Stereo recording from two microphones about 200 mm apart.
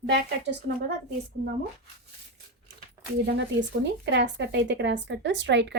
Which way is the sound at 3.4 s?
65° right (ahead or behind).